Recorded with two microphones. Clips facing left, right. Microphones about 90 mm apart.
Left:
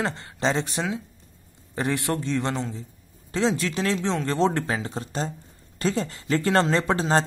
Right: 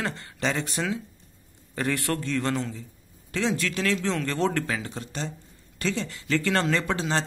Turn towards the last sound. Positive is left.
turn(degrees=35)  # may be behind; listen again after turning